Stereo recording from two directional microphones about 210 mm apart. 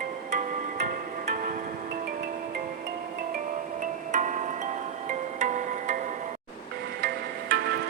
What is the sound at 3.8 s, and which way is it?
Music, 35° right (ahead or behind).